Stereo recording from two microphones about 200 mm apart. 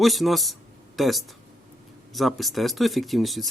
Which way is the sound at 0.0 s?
Centre (ahead or behind).